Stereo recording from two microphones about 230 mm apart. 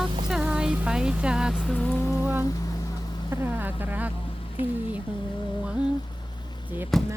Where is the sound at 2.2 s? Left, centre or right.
Centre.